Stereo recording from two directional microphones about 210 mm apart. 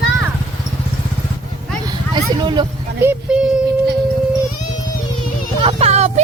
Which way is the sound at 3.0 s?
10° right (ahead or behind).